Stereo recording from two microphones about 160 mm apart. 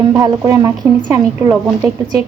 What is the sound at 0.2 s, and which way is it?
A woman's voice, 20° right (ahead or behind).